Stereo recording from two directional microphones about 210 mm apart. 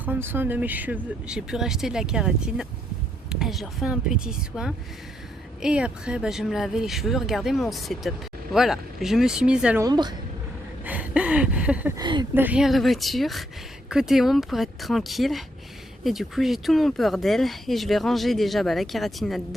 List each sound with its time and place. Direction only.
0.0 s speech: 10° right (ahead or behind)
9.8 s a woman's voice: 20° right (ahead or behind)
10.8 s a sound: 5° right (ahead or behind)
11.9 s a woman's voice: 20° right (ahead or behind)
12.3 s speech: 10° right (ahead or behind)